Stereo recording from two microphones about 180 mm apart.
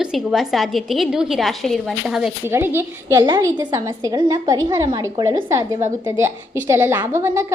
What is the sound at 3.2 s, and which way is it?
A woman's voice, 25° right (ahead or behind).